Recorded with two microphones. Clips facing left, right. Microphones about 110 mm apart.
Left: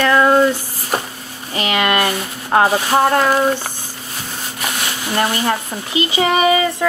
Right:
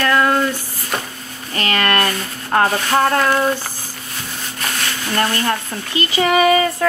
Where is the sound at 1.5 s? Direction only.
15° left (ahead or behind).